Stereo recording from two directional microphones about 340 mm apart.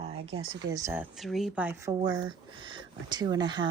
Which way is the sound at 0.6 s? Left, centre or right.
Centre.